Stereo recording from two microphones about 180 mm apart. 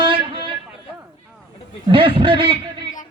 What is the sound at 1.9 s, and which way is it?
Speech, 30° right (ahead or behind).